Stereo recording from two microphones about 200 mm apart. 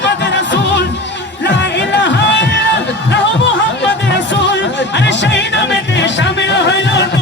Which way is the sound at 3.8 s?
60° left (ahead or behind).